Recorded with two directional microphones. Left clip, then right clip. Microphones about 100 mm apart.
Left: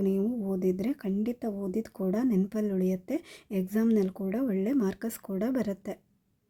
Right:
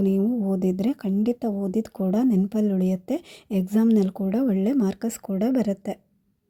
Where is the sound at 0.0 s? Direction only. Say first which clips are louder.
Right 6 dB; 30° right (ahead or behind).